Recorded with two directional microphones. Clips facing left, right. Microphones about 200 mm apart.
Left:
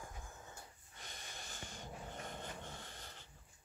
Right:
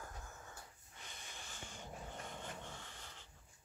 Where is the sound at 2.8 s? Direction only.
40° left (ahead or behind).